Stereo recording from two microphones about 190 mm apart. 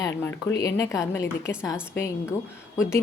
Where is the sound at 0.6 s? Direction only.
15° left (ahead or behind).